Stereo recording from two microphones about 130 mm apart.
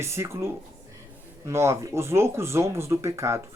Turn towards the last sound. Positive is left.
turn(degrees=-20)  # may be behind; listen again after turning